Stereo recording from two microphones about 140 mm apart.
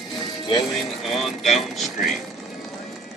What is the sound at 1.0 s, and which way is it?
Speech, centre (ahead or behind).